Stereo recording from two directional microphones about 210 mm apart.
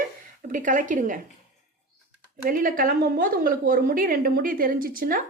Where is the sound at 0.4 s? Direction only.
40° right (ahead or behind).